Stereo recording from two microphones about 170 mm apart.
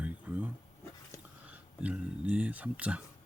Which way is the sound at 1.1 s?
15° left (ahead or behind).